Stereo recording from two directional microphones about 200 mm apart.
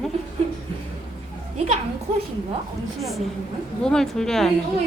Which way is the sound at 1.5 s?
35° right (ahead or behind).